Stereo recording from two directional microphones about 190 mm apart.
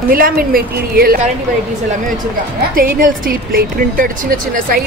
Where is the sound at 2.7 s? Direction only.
50° right (ahead or behind).